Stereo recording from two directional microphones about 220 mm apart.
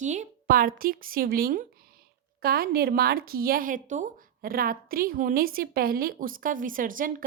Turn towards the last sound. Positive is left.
turn(degrees=-40)  # may be behind; listen again after turning